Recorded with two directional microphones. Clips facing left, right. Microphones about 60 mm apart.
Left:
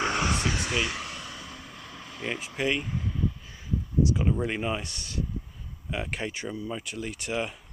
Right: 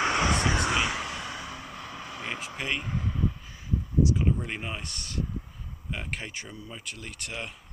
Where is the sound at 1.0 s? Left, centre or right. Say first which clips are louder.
Right 4 dB; centre.